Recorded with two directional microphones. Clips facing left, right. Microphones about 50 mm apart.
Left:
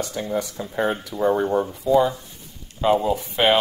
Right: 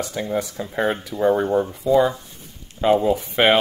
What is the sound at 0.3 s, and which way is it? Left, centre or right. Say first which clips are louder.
Speech: right 1 dB; right.